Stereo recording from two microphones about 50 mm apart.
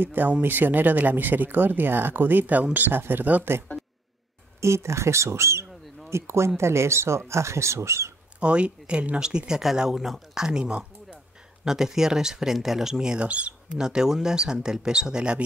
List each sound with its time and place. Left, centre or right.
0.0 s speech: right
3.0 s speech: right
4.6 s speech: right
8.4 s speech: right
11.6 s speech: centre
13.3 s speech: right
13.7 s speech: centre